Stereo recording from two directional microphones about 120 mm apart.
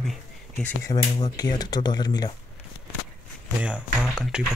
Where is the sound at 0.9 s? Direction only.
40° left (ahead or behind).